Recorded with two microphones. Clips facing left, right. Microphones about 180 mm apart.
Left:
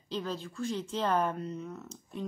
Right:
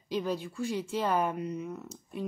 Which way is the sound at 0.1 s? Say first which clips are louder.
Right 4 dB; 15° right (ahead or behind).